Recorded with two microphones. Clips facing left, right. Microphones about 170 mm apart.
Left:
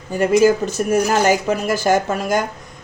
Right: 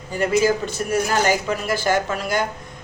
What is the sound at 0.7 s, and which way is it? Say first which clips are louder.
Speech: left 5 dB; 45° left (ahead or behind).